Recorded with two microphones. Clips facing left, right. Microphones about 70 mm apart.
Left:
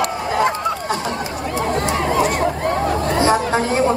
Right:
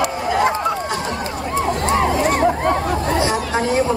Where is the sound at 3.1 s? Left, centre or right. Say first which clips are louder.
Left 3 dB; left.